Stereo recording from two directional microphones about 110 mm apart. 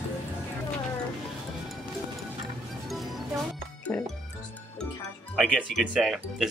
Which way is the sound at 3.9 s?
15° left (ahead or behind).